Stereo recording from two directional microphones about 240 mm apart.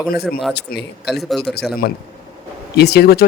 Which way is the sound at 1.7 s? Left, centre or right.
Left.